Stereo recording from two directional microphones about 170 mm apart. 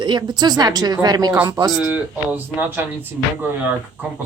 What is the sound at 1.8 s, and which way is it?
Speech, 10° right (ahead or behind).